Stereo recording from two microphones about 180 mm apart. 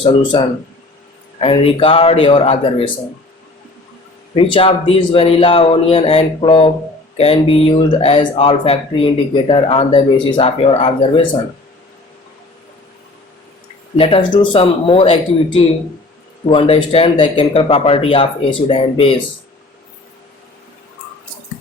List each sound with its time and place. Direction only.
0.0 s speech: 25° left (ahead or behind)
4.4 s speech: 30° left (ahead or behind)
13.9 s speech: 30° left (ahead or behind)